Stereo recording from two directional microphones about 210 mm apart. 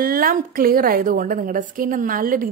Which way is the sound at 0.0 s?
45° right (ahead or behind).